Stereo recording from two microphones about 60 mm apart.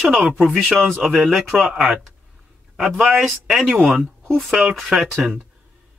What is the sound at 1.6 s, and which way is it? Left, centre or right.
Speech, centre.